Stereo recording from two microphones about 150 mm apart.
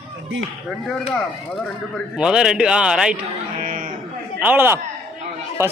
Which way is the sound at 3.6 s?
65° right (ahead or behind).